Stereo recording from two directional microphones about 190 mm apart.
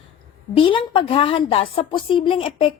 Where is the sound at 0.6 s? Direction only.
25° left (ahead or behind).